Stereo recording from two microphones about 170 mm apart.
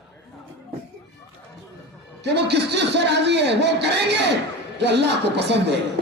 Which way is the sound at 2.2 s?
80° right.